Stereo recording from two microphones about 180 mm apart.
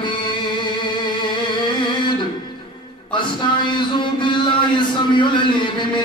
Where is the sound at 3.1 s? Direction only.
25° left (ahead or behind).